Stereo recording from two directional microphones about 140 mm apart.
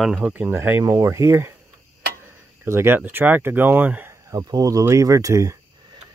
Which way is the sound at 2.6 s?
15° right (ahead or behind).